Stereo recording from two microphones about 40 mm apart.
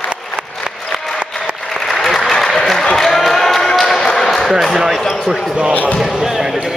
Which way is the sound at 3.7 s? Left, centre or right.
Centre.